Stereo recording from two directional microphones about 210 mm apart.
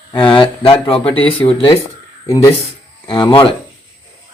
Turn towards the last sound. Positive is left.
turn(degrees=25)  # may be behind; listen again after turning